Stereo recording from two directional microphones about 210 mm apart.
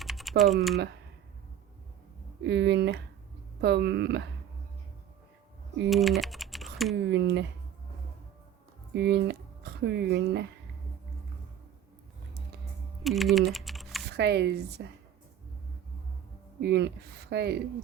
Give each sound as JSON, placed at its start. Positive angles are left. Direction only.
{"t": 0.0, "sound": "typing", "side_deg": 0}
{"t": 2.4, "sound": "speech", "side_deg": -55}
{"t": 5.9, "sound": "speech", "side_deg": 0}
{"t": 7.1, "sound": "speech", "side_deg": -55}
{"t": 8.9, "sound": "speech", "side_deg": -50}
{"t": 13.0, "sound": "speech", "side_deg": 0}
{"t": 14.1, "sound": "speech", "side_deg": -55}
{"t": 16.6, "sound": "speech", "side_deg": -50}